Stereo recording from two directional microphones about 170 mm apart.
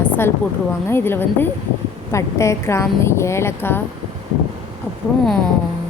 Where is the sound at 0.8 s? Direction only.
15° left (ahead or behind).